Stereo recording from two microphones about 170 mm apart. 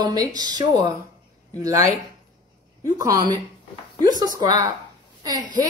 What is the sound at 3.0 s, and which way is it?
Speech, 20° right (ahead or behind).